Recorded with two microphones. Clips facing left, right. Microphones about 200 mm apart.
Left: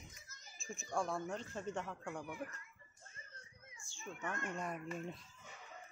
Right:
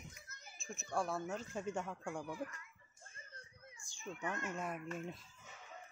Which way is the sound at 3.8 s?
15° right (ahead or behind).